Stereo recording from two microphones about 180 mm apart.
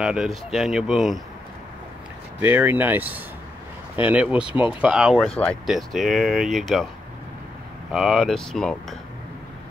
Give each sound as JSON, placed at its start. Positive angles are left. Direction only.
{"t": 0.0, "sound": "speech", "side_deg": 0}
{"t": 2.4, "sound": "speech", "side_deg": -10}
{"t": 7.9, "sound": "speech", "side_deg": 0}